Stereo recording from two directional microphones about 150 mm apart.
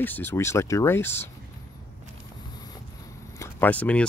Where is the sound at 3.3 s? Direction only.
15° left (ahead or behind).